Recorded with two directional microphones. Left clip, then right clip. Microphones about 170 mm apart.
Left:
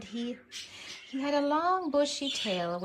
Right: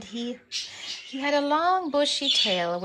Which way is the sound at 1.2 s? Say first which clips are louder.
Right 5 dB; 15° right (ahead or behind).